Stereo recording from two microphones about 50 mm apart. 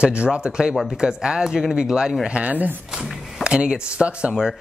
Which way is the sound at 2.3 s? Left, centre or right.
Right.